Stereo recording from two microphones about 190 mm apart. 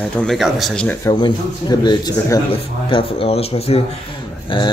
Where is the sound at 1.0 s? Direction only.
20° left (ahead or behind).